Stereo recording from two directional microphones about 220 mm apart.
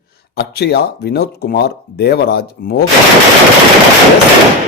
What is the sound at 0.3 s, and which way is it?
A man's voice, 50° left (ahead or behind).